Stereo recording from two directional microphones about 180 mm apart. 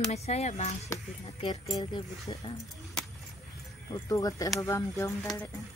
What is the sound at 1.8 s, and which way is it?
Speech, 20° left (ahead or behind).